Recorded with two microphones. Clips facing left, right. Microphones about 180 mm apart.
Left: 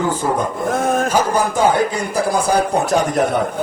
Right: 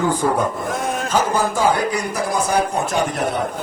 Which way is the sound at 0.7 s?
50° left (ahead or behind).